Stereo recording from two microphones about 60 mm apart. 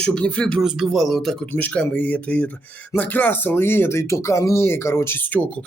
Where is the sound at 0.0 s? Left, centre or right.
Centre.